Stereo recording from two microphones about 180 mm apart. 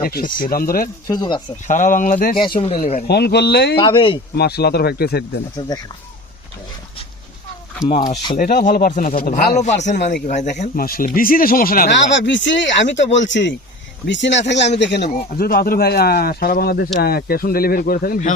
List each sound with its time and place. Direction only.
0.0 s speech: 55° left (ahead or behind)
1.0 s speech: 25° left (ahead or behind)
1.6 s speech: 45° left (ahead or behind)
2.6 s speech: 30° left (ahead or behind)
3.1 s speech: 65° left (ahead or behind)
3.8 s speech: 30° left (ahead or behind)
4.4 s speech: 65° left (ahead or behind)
5.5 s speech: 20° left (ahead or behind)
7.9 s speech: 30° left (ahead or behind)
8.4 s speech: 50° left (ahead or behind)
9.6 s speech: 40° left (ahead or behind)
11.9 s speech: 85° left; by 15.1 s 70° left (ahead or behind)
15.1 s speech: 55° left (ahead or behind)